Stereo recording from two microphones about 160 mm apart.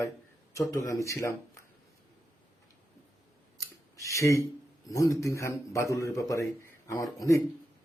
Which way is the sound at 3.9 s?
20° left (ahead or behind).